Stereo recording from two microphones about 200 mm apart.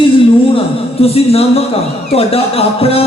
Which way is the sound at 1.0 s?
30° left (ahead or behind).